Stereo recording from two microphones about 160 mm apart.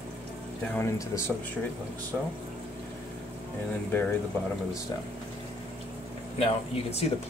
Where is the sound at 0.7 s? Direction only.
15° left (ahead or behind).